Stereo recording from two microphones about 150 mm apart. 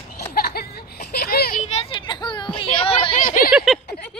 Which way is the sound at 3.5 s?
Centre (ahead or behind).